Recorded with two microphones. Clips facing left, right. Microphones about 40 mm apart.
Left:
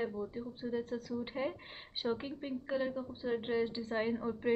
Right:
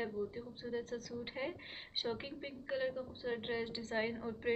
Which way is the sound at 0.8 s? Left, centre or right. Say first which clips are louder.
Left 4 dB; centre.